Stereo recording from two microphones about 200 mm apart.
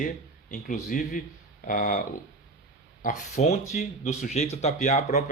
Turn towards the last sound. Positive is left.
turn(degrees=35)  # may be behind; listen again after turning